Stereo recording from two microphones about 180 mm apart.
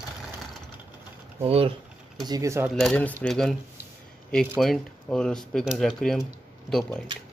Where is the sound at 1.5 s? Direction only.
30° right (ahead or behind).